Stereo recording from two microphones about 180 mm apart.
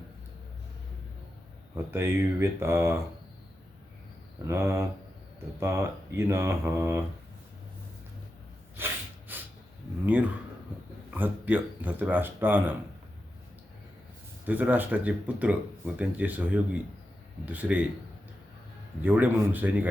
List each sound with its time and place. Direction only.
1.7 s speech: 15° right (ahead or behind)
4.4 s speech: 15° right (ahead or behind)
8.7 s snort: 10° right (ahead or behind)
11.1 s speech: 10° right (ahead or behind)
14.4 s speech: 10° right (ahead or behind)
19.0 s speech: 10° right (ahead or behind)